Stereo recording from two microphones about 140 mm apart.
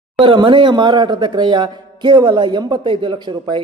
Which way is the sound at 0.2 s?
35° right (ahead or behind).